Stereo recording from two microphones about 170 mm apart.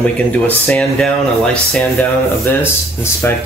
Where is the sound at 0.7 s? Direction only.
5° left (ahead or behind).